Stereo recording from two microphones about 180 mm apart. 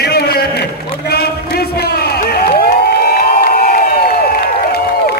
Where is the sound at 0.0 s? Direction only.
60° left (ahead or behind).